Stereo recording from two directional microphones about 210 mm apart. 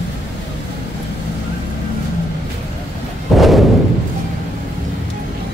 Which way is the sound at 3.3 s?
Centre (ahead or behind).